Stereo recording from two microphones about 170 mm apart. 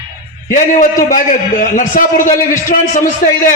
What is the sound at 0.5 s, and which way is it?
A man's voice, 50° left (ahead or behind).